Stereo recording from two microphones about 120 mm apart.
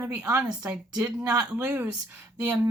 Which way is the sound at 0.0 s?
15° right (ahead or behind).